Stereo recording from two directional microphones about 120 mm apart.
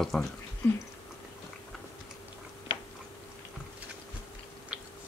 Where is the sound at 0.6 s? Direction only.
20° left (ahead or behind).